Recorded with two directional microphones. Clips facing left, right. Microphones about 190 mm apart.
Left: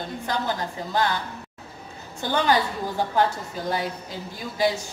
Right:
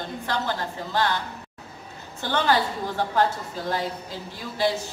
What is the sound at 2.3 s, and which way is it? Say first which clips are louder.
Speech: left 1 dB; 15° left (ahead or behind).